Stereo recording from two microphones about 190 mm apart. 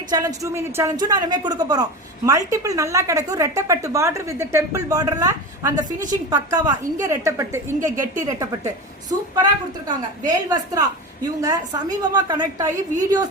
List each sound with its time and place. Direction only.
0.1 s a woman's voice: 20° right (ahead or behind)